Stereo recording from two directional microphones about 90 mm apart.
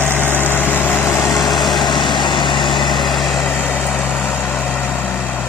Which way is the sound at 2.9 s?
Centre (ahead or behind).